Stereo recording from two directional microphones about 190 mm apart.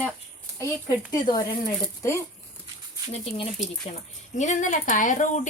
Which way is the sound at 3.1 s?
30° left (ahead or behind).